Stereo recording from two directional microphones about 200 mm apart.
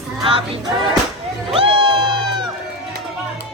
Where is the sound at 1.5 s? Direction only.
25° right (ahead or behind).